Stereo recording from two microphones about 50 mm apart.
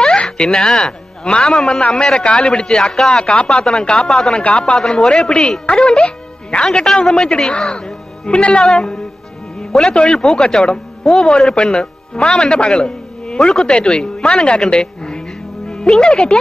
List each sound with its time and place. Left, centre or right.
0.0 s a sound: centre
1.5 s speech: centre
4.4 s speech: left
4.7 s a man's voice: centre
9.6 s music: centre
9.9 s a man's voice: centre